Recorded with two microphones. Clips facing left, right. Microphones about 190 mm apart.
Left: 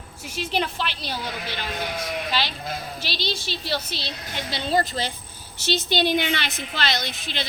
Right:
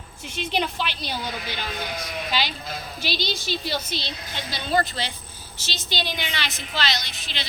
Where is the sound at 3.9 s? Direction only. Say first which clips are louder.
Right 1 dB; 35° left (ahead or behind).